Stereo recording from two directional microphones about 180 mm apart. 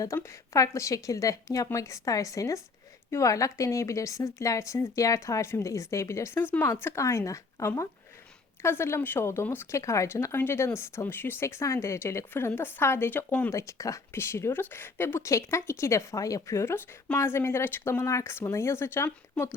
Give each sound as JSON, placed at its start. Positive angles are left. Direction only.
{"t": 0.0, "sound": "speech", "side_deg": 15}